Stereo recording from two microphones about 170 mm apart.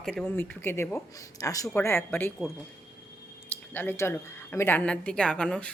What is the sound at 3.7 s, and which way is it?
Speech, 10° left (ahead or behind).